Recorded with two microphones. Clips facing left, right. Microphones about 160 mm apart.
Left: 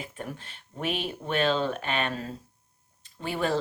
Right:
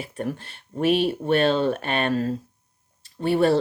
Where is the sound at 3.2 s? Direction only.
40° right (ahead or behind).